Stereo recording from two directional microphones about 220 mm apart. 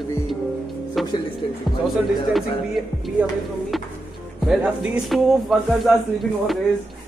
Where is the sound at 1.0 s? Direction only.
Centre (ahead or behind).